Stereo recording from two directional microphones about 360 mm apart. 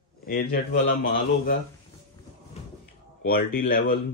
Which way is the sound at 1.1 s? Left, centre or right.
Left.